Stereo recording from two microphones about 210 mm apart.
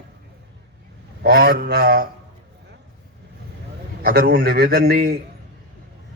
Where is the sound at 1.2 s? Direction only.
45° right (ahead or behind).